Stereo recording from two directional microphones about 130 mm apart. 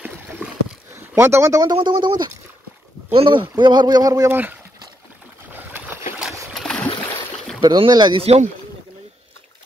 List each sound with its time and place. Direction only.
0.9 s a man's voice: 20° right (ahead or behind)
4.3 s speech: 15° right (ahead or behind)
5.5 s boat: 15° right (ahead or behind)
6.5 s a sound: 5° left (ahead or behind)
7.6 s a man's voice: 35° right (ahead or behind)
8.2 s speech: 55° right (ahead or behind)